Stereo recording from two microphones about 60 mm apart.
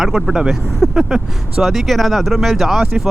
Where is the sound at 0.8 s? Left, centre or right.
Centre.